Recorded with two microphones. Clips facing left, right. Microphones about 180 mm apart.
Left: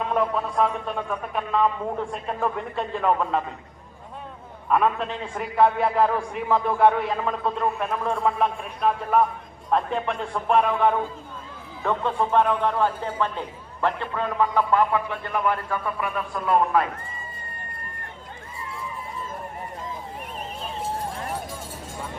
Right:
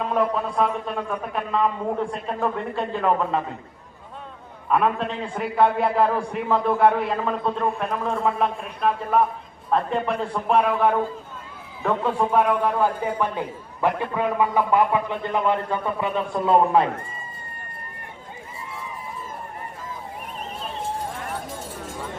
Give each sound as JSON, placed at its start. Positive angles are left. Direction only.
{"t": 0.1, "sound": "a man's voice", "side_deg": 0}
{"t": 4.7, "sound": "a man's voice", "side_deg": 0}